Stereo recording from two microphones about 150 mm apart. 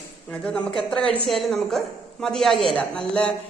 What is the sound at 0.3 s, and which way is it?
A man's voice, 5° left (ahead or behind).